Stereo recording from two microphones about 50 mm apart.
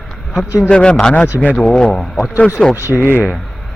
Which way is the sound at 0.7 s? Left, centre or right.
Centre.